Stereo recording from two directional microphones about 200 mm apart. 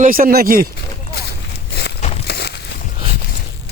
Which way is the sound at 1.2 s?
55° left (ahead or behind).